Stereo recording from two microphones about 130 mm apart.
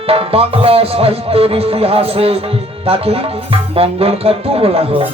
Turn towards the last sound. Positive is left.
turn(degrees=-50)  # may be behind; listen again after turning